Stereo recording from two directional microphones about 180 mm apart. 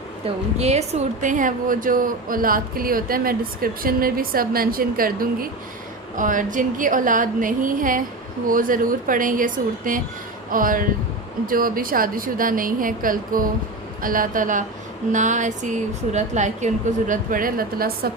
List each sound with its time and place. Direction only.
0.6 s a woman's voice: 35° right (ahead or behind); by 18.1 s 55° right (ahead or behind)